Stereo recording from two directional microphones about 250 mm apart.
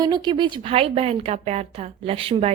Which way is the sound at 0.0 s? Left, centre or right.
Centre.